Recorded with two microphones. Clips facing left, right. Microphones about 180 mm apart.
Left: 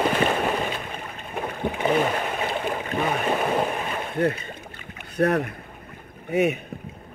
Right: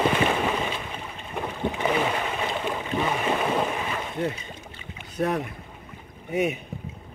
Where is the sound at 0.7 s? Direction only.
55° left (ahead or behind).